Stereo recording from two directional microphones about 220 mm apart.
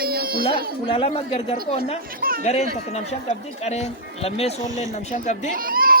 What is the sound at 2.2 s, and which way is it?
Chatter, 40° right (ahead or behind).